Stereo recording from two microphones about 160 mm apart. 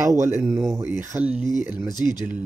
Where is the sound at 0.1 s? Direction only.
15° right (ahead or behind).